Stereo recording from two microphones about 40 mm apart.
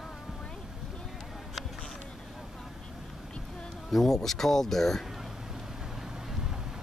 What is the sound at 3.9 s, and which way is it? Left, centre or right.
Speech, centre.